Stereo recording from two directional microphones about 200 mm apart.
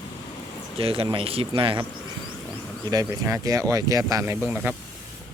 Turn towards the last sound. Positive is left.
turn(degrees=-5)  # may be behind; listen again after turning